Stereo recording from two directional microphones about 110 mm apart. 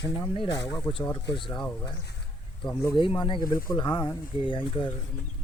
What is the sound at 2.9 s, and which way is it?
Speech, 50° left (ahead or behind).